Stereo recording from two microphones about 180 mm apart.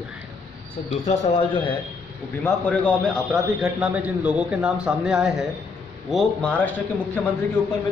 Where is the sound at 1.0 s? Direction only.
35° left (ahead or behind).